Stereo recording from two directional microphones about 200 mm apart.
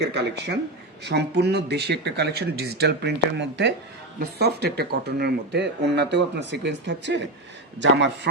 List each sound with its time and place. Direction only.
0.0 s speech: 55° right (ahead or behind)